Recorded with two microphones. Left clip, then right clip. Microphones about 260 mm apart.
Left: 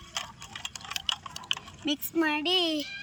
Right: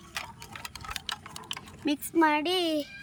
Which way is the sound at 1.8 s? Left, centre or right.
Centre.